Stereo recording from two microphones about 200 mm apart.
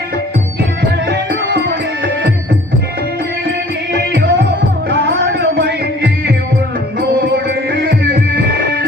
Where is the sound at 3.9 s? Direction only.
55° right (ahead or behind).